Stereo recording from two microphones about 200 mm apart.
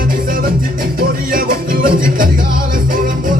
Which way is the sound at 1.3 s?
45° right (ahead or behind).